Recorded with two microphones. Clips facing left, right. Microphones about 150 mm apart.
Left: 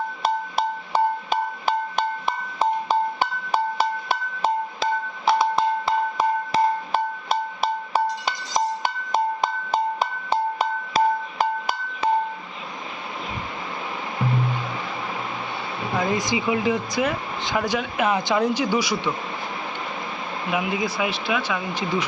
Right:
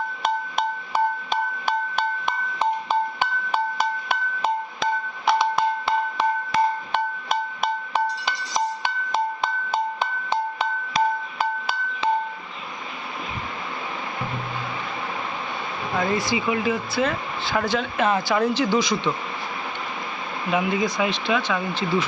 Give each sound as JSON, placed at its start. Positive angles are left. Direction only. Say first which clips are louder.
{"t": 2.9, "sound": "music", "louder": "left 1 dB", "side_deg": 40}
{"t": 6.5, "sound": "music", "louder": "left 1 dB", "side_deg": 35}
{"t": 16.0, "sound": "speech", "louder": "even", "side_deg": 20}
{"t": 20.5, "sound": "speech", "louder": "right 3 dB", "side_deg": 10}